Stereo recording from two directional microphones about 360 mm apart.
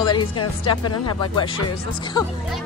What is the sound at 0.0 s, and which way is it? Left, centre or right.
Speech, centre.